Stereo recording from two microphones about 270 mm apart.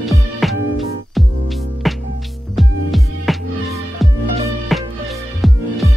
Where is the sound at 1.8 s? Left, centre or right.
Centre.